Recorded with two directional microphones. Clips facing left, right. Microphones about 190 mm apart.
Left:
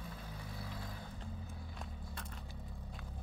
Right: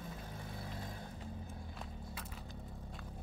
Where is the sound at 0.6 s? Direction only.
20° right (ahead or behind).